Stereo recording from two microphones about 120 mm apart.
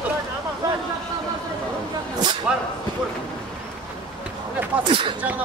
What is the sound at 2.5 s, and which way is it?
Speech, 10° right (ahead or behind).